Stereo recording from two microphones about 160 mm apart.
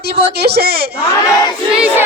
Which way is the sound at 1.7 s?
10° right (ahead or behind).